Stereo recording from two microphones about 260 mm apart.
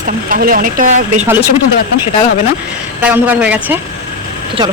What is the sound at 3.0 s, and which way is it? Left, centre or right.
Speech, centre.